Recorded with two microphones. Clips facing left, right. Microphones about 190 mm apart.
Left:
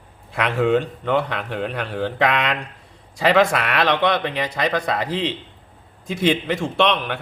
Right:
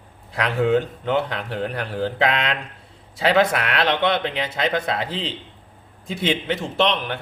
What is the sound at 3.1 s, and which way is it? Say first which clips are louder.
Speech: left 1 dB; centre (ahead or behind).